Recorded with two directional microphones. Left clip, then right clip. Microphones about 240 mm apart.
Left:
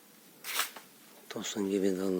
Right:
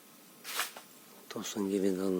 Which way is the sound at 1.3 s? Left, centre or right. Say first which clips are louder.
Left 1 dB; centre.